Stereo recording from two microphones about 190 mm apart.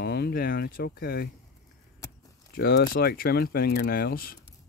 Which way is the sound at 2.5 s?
55° left (ahead or behind).